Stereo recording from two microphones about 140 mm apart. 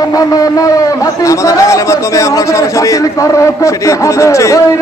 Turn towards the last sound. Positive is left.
turn(degrees=20)  # may be behind; listen again after turning